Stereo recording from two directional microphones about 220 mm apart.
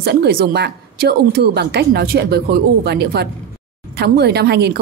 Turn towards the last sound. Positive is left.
turn(degrees=-50)  # may be behind; listen again after turning